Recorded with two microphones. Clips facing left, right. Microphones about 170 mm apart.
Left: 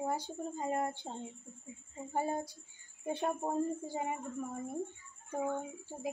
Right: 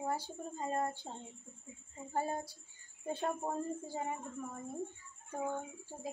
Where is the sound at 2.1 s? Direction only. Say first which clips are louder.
Left 2 dB; 15° left (ahead or behind).